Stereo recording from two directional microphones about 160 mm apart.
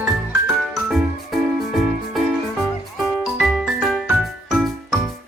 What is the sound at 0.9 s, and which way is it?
Music, centre (ahead or behind).